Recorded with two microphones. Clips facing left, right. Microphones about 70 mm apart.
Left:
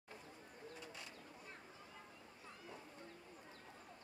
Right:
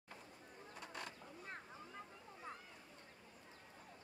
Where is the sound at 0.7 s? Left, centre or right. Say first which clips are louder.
Right 3 dB; right.